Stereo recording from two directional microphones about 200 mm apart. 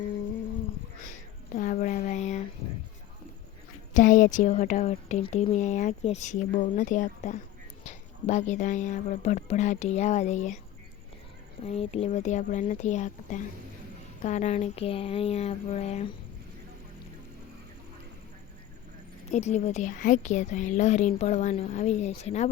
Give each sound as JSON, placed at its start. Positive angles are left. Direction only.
{"t": 1.0, "sound": "a sound", "side_deg": 40}
{"t": 3.9, "sound": "a woman's voice", "side_deg": 40}
{"t": 11.6, "sound": "a woman's voice", "side_deg": 30}
{"t": 19.3, "sound": "a woman's voice", "side_deg": 35}